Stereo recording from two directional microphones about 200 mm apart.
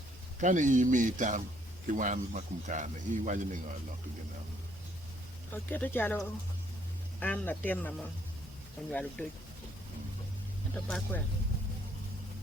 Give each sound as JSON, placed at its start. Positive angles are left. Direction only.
{"t": 0.3, "sound": "a man's voice", "side_deg": -40}
{"t": 5.6, "sound": "speech", "side_deg": 10}
{"t": 10.8, "sound": "speech", "side_deg": 5}